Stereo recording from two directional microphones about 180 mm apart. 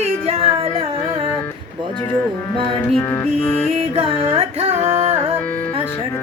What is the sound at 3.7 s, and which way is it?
Music, 30° right (ahead or behind).